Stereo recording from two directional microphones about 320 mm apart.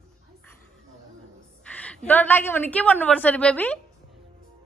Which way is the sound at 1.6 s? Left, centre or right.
Centre.